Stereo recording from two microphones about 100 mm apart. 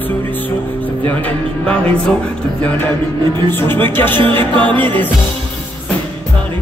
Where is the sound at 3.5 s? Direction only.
20° left (ahead or behind).